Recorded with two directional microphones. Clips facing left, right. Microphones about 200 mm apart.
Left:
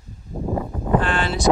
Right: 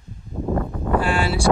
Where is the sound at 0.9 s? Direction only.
10° right (ahead or behind).